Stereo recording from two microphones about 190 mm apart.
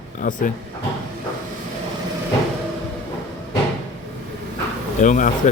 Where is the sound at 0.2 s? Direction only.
45° left (ahead or behind).